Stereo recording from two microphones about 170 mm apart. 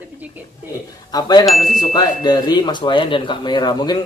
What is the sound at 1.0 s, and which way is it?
Speech, 25° left (ahead or behind).